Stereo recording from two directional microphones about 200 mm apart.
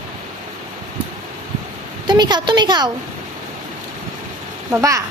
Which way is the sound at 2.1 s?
20° right (ahead or behind).